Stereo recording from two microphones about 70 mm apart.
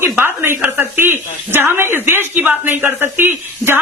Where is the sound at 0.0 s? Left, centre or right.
Right.